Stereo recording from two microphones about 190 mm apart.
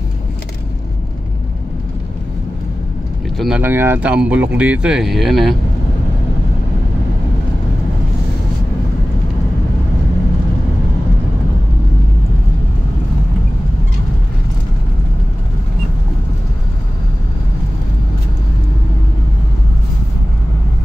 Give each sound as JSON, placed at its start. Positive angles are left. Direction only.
{"t": 3.3, "sound": "speech", "side_deg": -5}